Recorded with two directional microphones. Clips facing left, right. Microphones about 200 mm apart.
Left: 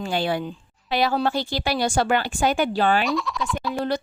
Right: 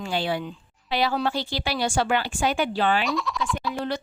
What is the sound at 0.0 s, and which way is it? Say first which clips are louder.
A woman's voice: left 2 dB; 45° left (ahead or behind).